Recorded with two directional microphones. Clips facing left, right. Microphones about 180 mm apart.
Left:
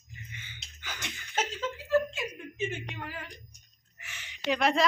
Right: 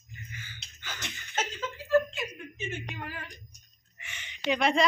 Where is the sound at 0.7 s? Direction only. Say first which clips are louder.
Even; 10° left (ahead or behind).